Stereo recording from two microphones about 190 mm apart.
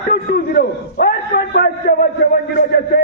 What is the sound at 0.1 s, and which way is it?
A man's voice, 50° left (ahead or behind).